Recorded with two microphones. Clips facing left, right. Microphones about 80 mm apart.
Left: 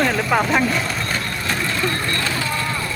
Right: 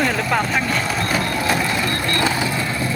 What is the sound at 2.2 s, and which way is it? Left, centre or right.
Vehicle, centre.